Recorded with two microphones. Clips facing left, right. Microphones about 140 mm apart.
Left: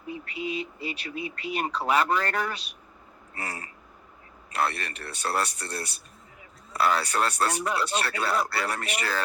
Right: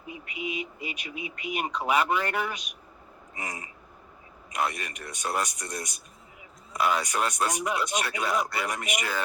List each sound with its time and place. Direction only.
0.1 s speech: 15° right (ahead or behind)